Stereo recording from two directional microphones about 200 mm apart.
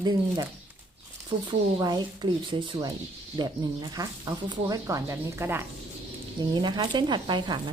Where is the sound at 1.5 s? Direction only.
20° right (ahead or behind).